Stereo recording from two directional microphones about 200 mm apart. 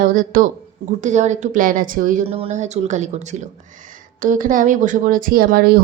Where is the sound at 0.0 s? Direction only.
40° right (ahead or behind).